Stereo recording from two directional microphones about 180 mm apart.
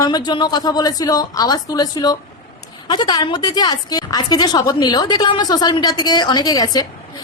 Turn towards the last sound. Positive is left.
turn(degrees=20)  # may be behind; listen again after turning